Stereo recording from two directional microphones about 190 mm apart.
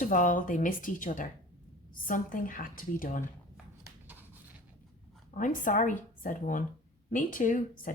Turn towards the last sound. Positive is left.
turn(degrees=45)  # may be behind; listen again after turning